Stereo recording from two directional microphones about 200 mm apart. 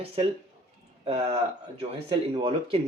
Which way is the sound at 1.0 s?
30° right (ahead or behind).